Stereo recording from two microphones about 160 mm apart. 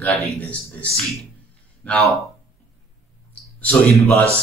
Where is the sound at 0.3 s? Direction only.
10° left (ahead or behind).